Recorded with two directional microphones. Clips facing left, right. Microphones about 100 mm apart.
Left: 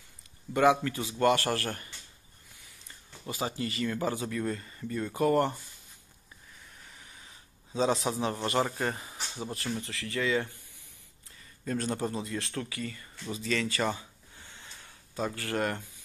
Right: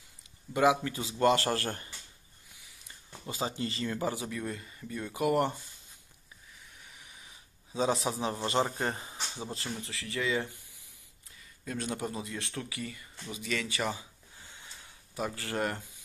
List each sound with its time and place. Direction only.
0.6 s a man's voice: 20° right (ahead or behind)
5.2 s speech: 15° right (ahead or behind)
8.0 s a man's voice: 20° right (ahead or behind)
11.6 s speech: 10° right (ahead or behind)
13.4 s a sound: 10° right (ahead or behind)
15.1 s a man's voice: 15° right (ahead or behind)